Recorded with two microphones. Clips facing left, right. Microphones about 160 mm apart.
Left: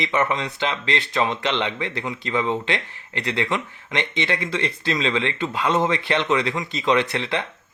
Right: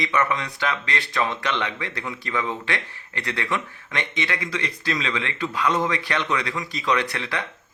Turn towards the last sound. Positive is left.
turn(degrees=20)  # may be behind; listen again after turning